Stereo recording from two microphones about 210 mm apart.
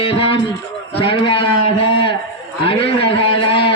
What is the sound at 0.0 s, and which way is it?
A man's voice, 25° left (ahead or behind).